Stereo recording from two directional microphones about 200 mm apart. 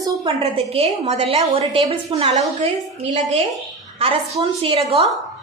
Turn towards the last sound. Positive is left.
turn(degrees=-30)  # may be behind; listen again after turning